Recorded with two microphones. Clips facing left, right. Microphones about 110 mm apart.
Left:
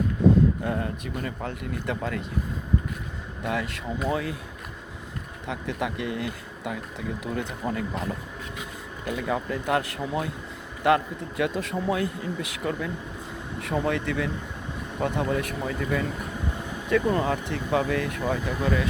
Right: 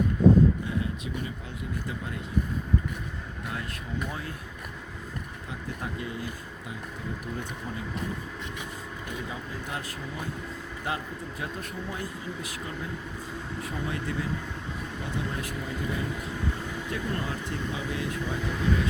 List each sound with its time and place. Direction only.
0.6 s speech: 55° left (ahead or behind); by 2.2 s 75° left (ahead or behind)
3.4 s a man's voice: 85° left
5.5 s speech: 80° left
9.0 s a man's voice: 70° left (ahead or behind)
15.0 s speech: 65° left (ahead or behind)